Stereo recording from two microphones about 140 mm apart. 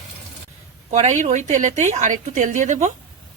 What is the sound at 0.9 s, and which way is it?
A woman's voice, 60° right (ahead or behind).